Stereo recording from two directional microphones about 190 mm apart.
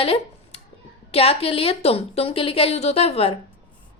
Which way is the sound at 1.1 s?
30° left (ahead or behind).